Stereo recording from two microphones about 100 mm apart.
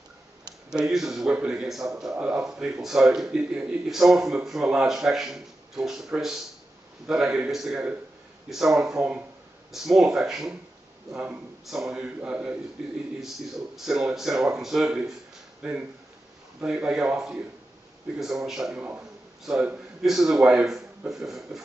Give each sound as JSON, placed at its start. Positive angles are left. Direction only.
{"t": 0.9, "sound": "a man's voice", "side_deg": -5}
{"t": 18.8, "sound": "a man's voice", "side_deg": -15}